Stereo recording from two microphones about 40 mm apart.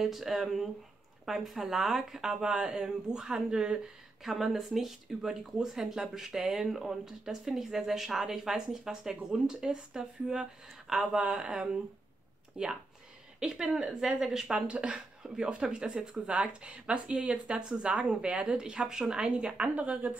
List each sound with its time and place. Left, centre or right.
0.0 s speech: centre; by 3.9 s right
4.2 s speech: centre
11.3 s a woman's voice: right
14.7 s a woman's voice: right
19.7 s speech: right